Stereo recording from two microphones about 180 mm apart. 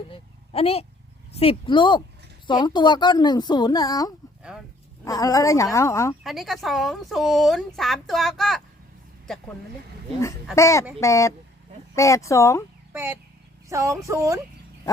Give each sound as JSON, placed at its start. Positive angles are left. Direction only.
{"t": 0.1, "sound": "a woman's voice", "side_deg": 30}
{"t": 6.2, "sound": "speech", "side_deg": 0}
{"t": 10.5, "sound": "a woman's voice", "side_deg": 15}
{"t": 12.9, "sound": "speech", "side_deg": -10}